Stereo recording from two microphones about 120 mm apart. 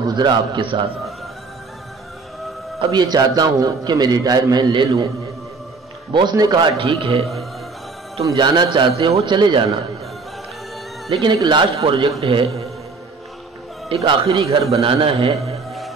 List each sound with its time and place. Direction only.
0.0 s a man's voice: 35° right (ahead or behind)
2.8 s a man's voice: 35° right (ahead or behind)
6.1 s a man's voice: 35° right (ahead or behind)
6.8 s a man's voice: 45° right (ahead or behind)
8.4 s a man's voice: 40° right (ahead or behind)
11.3 s a man's voice: 40° right (ahead or behind)
13.8 s a man's voice: 55° right (ahead or behind)